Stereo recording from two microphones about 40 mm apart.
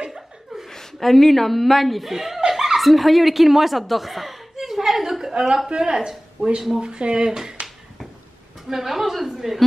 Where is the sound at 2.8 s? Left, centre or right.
Centre.